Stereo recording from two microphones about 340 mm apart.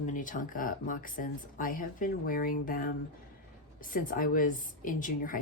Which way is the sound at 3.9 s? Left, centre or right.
Left.